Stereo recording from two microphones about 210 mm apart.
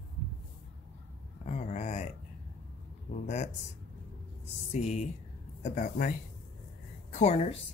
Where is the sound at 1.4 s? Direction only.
35° left (ahead or behind).